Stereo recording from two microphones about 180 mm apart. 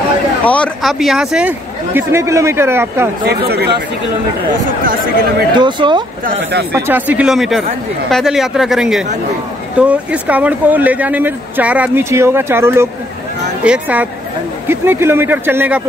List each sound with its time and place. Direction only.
0.5 s speech: 5° left (ahead or behind)
2.0 s speech: 15° right (ahead or behind)
3.3 s speech: 65° right (ahead or behind)
5.5 s speech: 25° right (ahead or behind)
6.7 s speech: 10° right (ahead or behind)